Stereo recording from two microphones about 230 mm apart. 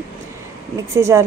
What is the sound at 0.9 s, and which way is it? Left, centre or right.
Speech, centre.